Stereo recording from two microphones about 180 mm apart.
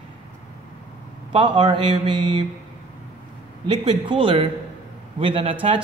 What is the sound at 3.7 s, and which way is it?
Speech, 25° right (ahead or behind).